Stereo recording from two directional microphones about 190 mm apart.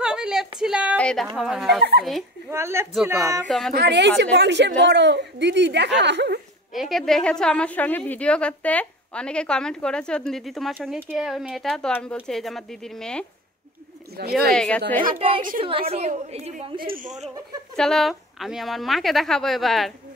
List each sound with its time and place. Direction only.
0.0 s a sound: 5° right (ahead or behind)
0.9 s a woman's voice: 5° left (ahead or behind)
1.8 s a woman's voice: 60° right (ahead or behind)
2.5 s a woman's voice: 15° right (ahead or behind)
2.9 s a woman's voice: 5° right (ahead or behind)
3.7 s a woman's voice: 60° right (ahead or behind)
6.7 s a woman's voice: centre (ahead or behind)
14.2 s a woman's voice: 60° right (ahead or behind)
14.5 s a woman's voice: 5° left (ahead or behind)
15.1 s a woman's voice: 30° right (ahead or behind)
16.8 s speech: 45° right (ahead or behind)
17.7 s a woman's voice: centre (ahead or behind)